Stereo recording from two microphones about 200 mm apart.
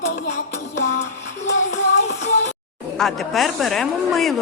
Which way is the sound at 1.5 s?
35° left (ahead or behind).